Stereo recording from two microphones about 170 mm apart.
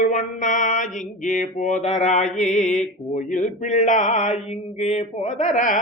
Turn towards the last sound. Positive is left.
turn(degrees=50)  # may be behind; listen again after turning